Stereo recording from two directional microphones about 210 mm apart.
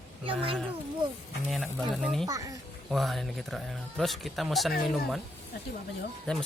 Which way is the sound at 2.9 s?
Centre (ahead or behind).